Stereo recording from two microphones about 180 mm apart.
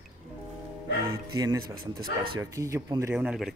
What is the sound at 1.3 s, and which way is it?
Speech, 20° right (ahead or behind).